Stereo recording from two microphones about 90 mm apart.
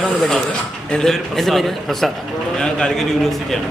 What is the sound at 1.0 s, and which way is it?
Speech, 5° left (ahead or behind).